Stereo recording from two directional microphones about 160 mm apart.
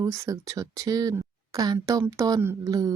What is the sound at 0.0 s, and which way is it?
Speech, 20° right (ahead or behind).